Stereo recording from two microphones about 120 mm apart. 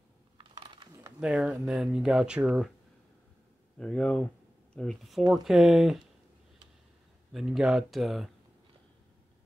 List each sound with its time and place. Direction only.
0.4 s typing: 45° right (ahead or behind)
1.2 s speech: 5° right (ahead or behind)
3.7 s speech: 5° left (ahead or behind)
7.3 s speech: 5° right (ahead or behind)